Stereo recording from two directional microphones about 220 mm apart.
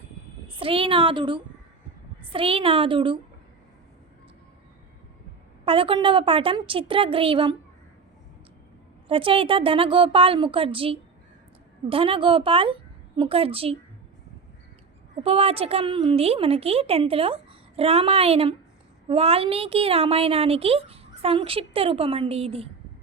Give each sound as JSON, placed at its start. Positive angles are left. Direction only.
{"t": 0.5, "sound": "a woman's voice", "side_deg": -25}
{"t": 5.6, "sound": "a woman's voice", "side_deg": -25}
{"t": 9.0, "sound": "a woman's voice", "side_deg": -25}
{"t": 15.2, "sound": "a woman's voice", "side_deg": -25}